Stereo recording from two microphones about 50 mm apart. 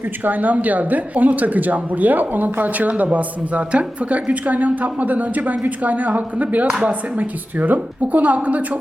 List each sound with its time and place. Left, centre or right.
0.3 s a woman's voice: right